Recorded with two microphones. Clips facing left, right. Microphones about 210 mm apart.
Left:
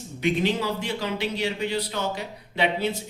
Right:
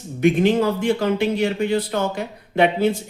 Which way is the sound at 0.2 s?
50° right (ahead or behind).